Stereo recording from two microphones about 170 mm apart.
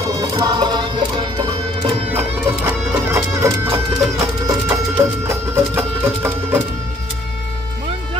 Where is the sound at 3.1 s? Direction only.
15° right (ahead or behind).